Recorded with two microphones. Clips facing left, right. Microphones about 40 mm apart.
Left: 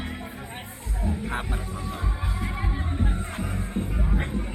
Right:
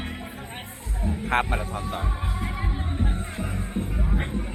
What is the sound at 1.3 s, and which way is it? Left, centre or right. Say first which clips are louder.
Speech: right 7 dB; right.